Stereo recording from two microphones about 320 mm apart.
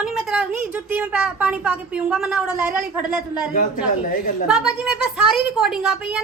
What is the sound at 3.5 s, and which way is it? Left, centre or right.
Speech, left.